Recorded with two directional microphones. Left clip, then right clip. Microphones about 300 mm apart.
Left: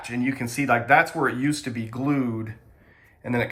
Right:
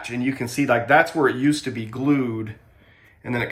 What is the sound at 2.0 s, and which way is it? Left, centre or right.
Speech, centre.